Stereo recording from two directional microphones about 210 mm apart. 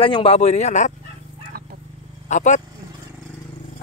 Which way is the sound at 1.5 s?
45° right (ahead or behind).